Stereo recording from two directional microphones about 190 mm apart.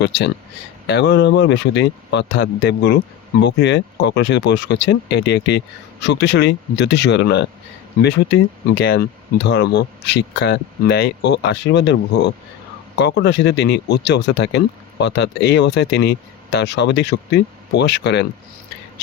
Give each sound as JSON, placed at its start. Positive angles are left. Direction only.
{"t": 0.9, "sound": "speech", "side_deg": 65}